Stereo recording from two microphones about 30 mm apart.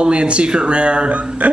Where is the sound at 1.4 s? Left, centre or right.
Right.